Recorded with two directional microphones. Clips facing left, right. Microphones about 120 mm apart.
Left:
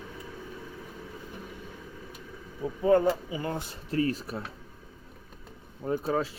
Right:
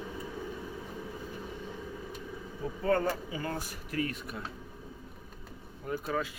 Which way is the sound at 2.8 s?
15° left (ahead or behind).